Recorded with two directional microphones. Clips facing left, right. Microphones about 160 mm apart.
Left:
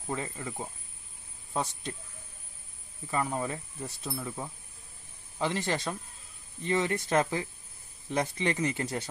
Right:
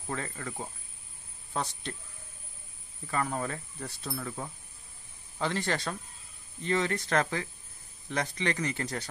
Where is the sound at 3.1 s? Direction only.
15° left (ahead or behind).